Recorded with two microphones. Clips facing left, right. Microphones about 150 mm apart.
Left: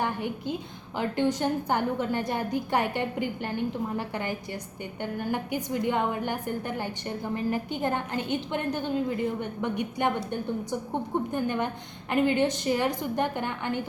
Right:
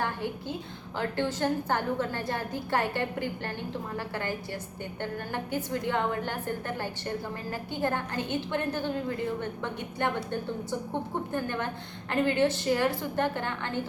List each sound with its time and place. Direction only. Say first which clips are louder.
0.0 s a woman's voice: left 2 dB; 15° left (ahead or behind)
11.3 s a woman's voice: left 3 dB; 15° left (ahead or behind)